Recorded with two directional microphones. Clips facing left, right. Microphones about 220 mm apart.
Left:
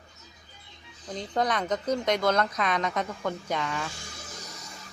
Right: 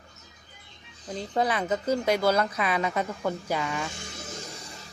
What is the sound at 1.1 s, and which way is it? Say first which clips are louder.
Speech: right 1 dB; 5° right (ahead or behind).